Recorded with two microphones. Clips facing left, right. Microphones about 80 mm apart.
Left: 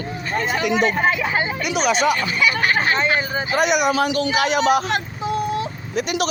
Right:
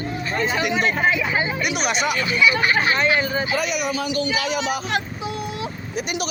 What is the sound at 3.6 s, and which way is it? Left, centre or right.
A man's voice, left.